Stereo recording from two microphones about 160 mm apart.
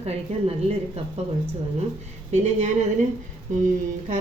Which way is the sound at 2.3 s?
45° right (ahead or behind).